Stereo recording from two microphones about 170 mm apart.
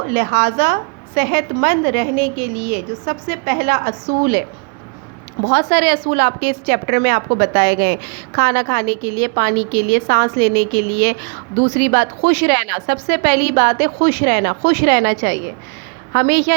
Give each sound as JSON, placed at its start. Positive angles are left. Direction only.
{"t": 0.1, "sound": "a woman's voice", "side_deg": -65}
{"t": 5.5, "sound": "a woman's voice", "side_deg": -65}